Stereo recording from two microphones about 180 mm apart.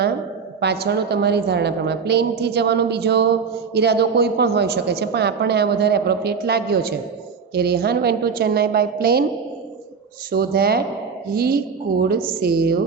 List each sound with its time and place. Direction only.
0.6 s a woman's voice: 65° right (ahead or behind)
10.3 s a woman's voice: 60° right (ahead or behind)